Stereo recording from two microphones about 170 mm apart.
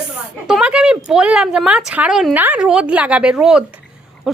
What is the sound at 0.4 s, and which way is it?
Speech, 5° right (ahead or behind).